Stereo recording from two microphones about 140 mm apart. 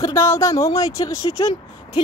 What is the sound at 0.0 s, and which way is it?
Speech, 20° left (ahead or behind).